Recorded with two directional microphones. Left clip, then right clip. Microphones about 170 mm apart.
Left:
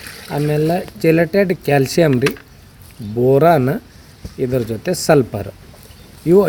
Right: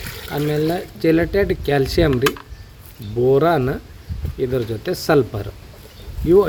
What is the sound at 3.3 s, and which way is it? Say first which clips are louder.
Speech: left 4 dB; 45° left (ahead or behind).